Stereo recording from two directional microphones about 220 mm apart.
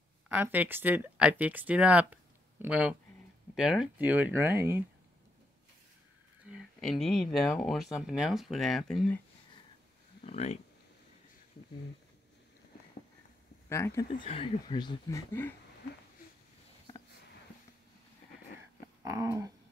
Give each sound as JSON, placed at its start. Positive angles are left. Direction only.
{"t": 0.3, "sound": "speech", "side_deg": -10}
{"t": 6.8, "sound": "speech", "side_deg": 0}
{"t": 10.2, "sound": "speech", "side_deg": 30}
{"t": 13.7, "sound": "speech", "side_deg": 10}
{"t": 14.2, "sound": "speech", "side_deg": 25}
{"t": 19.0, "sound": "speech", "side_deg": -15}